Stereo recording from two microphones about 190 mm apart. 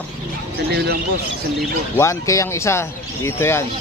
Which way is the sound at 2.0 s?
15° left (ahead or behind).